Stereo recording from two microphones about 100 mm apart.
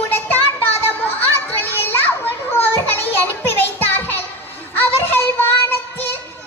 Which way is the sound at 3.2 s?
20° left (ahead or behind).